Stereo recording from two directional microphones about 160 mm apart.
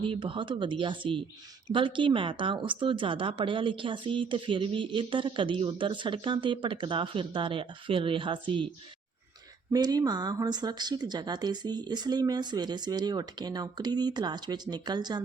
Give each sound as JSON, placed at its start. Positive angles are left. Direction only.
{"t": 0.0, "sound": "speech", "side_deg": -30}
{"t": 9.7, "sound": "speech", "side_deg": -25}